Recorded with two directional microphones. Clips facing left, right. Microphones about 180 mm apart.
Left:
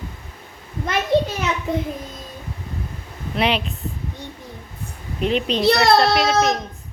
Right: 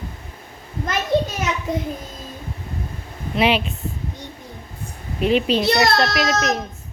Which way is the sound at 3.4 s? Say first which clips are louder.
Right 2 dB; 5° right (ahead or behind).